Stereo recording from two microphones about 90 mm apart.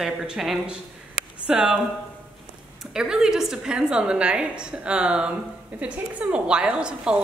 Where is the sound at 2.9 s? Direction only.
10° right (ahead or behind).